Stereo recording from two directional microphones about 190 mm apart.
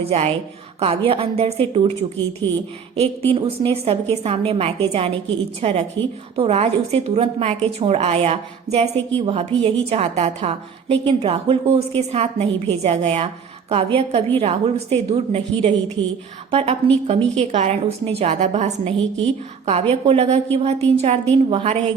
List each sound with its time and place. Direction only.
0.0 s a woman's voice: 35° right (ahead or behind)
18.9 s a woman's voice: 5° left (ahead or behind)
19.9 s a woman's voice: 35° right (ahead or behind)